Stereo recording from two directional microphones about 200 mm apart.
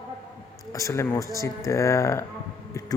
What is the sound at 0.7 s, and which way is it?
A man's voice, 15° left (ahead or behind).